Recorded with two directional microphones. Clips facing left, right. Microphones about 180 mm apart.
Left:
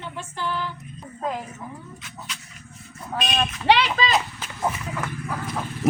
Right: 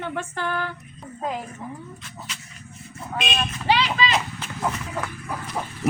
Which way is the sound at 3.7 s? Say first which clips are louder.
Left 3 dB; 70° left (ahead or behind).